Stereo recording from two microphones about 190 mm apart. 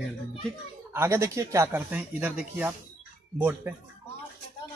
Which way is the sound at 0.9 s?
15° right (ahead or behind).